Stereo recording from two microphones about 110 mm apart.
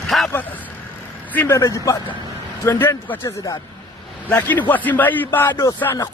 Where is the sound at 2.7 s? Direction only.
20° left (ahead or behind).